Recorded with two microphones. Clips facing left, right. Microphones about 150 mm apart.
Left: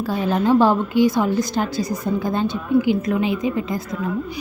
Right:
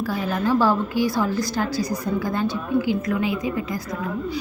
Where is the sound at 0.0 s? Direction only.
25° left (ahead or behind).